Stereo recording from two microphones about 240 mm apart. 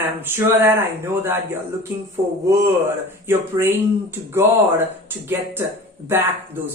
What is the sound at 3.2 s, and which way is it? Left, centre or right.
Speech, centre.